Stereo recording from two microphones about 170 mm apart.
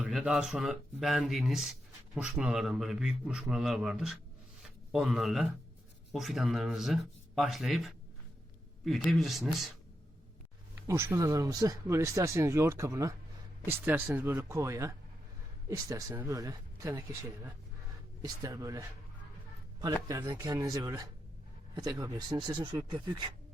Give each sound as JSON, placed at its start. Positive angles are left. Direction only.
{"t": 0.0, "sound": "a man's voice", "side_deg": -5}
{"t": 10.8, "sound": "speech", "side_deg": -15}